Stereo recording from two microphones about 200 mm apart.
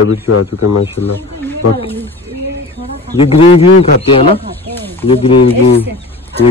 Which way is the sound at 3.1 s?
30° left (ahead or behind).